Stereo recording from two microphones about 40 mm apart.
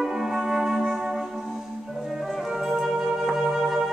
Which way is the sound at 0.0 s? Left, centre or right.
Centre.